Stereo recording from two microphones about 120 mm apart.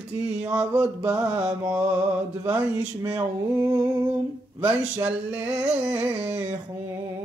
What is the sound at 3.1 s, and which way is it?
Mantra, 20° right (ahead or behind).